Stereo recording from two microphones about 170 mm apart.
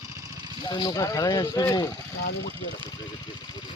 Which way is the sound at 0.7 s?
25° left (ahead or behind).